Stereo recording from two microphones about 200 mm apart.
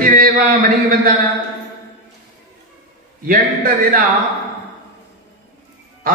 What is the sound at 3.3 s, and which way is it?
Speech, 45° right (ahead or behind).